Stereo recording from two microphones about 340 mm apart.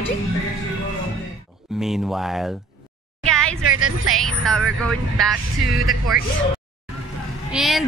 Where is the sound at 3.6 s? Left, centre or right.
Right.